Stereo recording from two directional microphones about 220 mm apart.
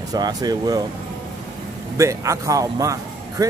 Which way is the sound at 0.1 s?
15° right (ahead or behind).